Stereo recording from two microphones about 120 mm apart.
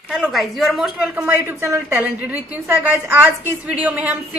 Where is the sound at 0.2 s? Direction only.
Centre (ahead or behind).